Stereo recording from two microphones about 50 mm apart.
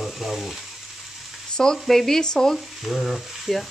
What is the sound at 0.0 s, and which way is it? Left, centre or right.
Frying, centre.